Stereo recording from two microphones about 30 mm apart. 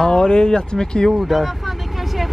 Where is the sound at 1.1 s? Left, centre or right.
Centre.